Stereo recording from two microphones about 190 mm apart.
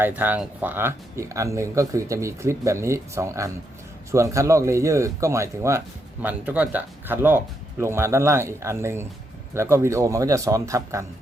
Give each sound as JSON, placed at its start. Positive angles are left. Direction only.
{"t": 0.0, "sound": "speech", "side_deg": -10}